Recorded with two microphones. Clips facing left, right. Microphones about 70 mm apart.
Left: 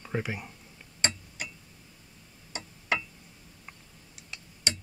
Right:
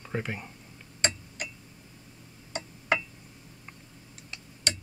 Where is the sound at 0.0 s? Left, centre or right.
Centre.